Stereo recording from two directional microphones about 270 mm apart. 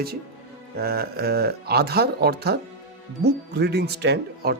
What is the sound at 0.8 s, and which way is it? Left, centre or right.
Speech, right.